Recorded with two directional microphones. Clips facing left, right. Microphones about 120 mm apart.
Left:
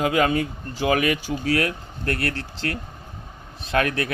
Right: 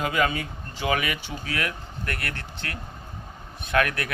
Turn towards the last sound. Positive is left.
turn(degrees=30)  # may be behind; listen again after turning